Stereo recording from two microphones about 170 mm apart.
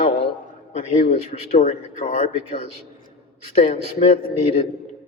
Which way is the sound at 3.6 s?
35° left (ahead or behind).